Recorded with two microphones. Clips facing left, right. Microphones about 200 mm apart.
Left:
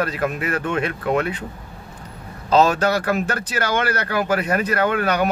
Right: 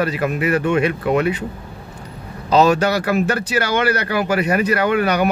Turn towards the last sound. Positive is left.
turn(degrees=-10)  # may be behind; listen again after turning